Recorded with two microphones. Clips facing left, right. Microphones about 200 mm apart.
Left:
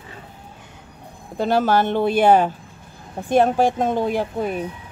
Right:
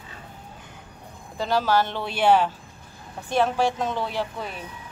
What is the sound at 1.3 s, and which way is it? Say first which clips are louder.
Speech: left 4 dB; 55° left (ahead or behind).